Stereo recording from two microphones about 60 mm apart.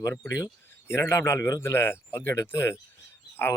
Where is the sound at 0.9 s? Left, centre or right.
Left.